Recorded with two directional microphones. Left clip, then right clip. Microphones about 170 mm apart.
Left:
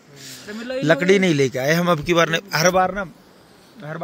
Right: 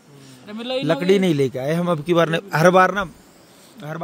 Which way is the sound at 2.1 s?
35° right (ahead or behind).